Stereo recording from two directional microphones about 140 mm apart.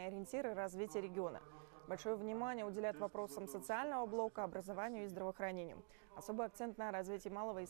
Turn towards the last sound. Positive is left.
turn(degrees=30)  # may be behind; listen again after turning